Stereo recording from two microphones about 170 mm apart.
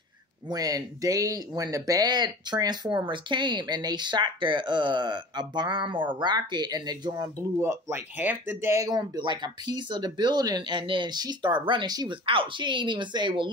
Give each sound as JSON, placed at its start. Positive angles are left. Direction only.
{"t": 0.5, "sound": "speech", "side_deg": -20}